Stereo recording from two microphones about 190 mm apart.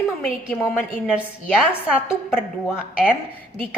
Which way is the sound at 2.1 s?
5° right (ahead or behind).